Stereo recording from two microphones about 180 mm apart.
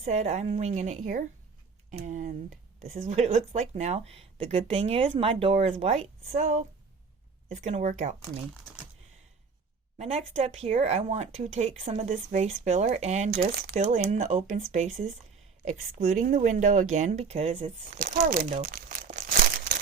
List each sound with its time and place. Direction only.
0.1 s speech: 35° right (ahead or behind)
10.0 s speech: 35° right (ahead or behind)
13.3 s speech: 60° right (ahead or behind)
13.7 s speech: 45° right (ahead or behind)